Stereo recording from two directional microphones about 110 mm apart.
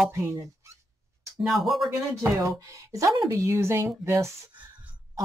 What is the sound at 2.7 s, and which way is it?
Speech, 25° right (ahead or behind).